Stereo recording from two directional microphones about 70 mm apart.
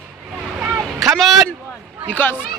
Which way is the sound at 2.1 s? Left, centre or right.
Left.